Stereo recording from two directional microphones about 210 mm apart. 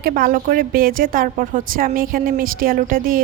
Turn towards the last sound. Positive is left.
turn(degrees=-40)  # may be behind; listen again after turning